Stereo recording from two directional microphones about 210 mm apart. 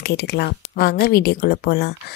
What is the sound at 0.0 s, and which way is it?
Speech, 50° left (ahead or behind).